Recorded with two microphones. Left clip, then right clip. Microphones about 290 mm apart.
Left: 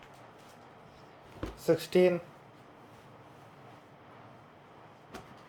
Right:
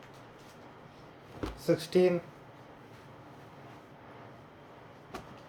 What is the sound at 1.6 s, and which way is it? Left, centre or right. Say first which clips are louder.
Speech: left 1 dB; centre.